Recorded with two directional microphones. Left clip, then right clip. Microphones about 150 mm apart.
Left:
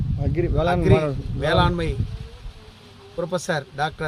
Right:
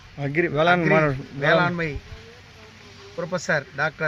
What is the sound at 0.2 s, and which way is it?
Speech, centre (ahead or behind).